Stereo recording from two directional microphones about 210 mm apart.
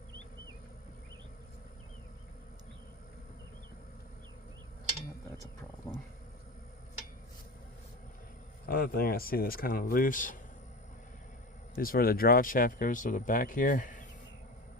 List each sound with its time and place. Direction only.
8.6 s speech: 45° left (ahead or behind)
11.8 s speech: 45° left (ahead or behind)